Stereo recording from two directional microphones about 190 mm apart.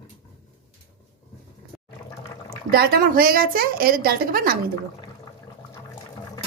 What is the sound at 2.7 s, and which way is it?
A woman's voice, 50° right (ahead or behind).